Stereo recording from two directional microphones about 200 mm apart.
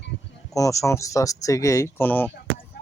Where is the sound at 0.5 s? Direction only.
15° left (ahead or behind).